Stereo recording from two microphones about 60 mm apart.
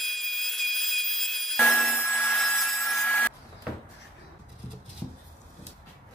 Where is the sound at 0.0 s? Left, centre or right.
Centre.